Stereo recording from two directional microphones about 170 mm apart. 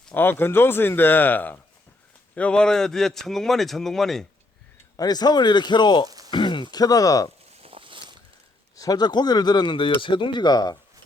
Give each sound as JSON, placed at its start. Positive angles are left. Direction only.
{"t": 0.0, "sound": "speech", "side_deg": 10}
{"t": 4.9, "sound": "speech", "side_deg": 25}
{"t": 6.1, "sound": "a sound", "side_deg": -20}
{"t": 6.3, "sound": "speech", "side_deg": 30}
{"t": 7.6, "sound": "boat", "side_deg": -30}
{"t": 8.7, "sound": "speech", "side_deg": 20}